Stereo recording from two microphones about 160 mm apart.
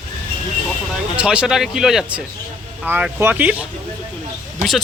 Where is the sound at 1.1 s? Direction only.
5° right (ahead or behind).